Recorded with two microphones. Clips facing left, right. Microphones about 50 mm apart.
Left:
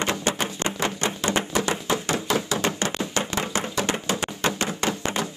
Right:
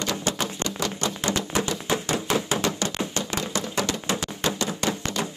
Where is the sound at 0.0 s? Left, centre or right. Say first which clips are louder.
Left 2 dB; left.